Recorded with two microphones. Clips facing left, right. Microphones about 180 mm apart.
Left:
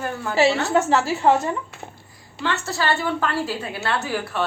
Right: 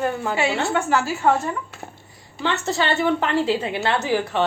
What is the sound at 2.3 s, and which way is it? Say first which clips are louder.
A woman's voice: right 3 dB; 20° right (ahead or behind).